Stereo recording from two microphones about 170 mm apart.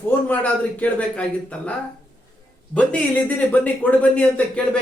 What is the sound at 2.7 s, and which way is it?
A man's voice, 10° left (ahead or behind).